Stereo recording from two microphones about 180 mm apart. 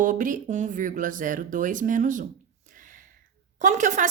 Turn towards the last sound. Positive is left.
turn(degrees=-45)  # may be behind; listen again after turning